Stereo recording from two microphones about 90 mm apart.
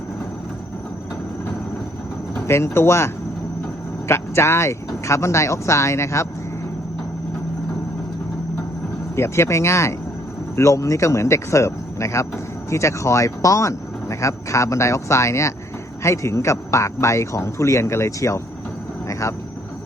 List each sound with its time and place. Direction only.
2.5 s speech: 30° left (ahead or behind)
4.1 s speech: 30° left (ahead or behind)
9.1 s speech: 30° left (ahead or behind)